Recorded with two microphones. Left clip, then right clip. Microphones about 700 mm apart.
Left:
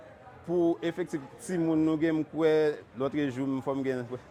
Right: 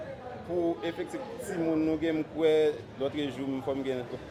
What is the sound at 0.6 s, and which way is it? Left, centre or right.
A man's voice, left.